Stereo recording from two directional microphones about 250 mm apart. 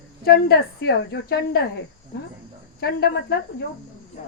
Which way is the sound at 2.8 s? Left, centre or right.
Left.